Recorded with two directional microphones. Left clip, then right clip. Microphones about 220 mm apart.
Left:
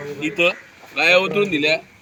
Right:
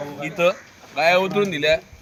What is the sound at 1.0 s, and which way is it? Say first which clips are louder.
Speech: left 2 dB; 20° right (ahead or behind).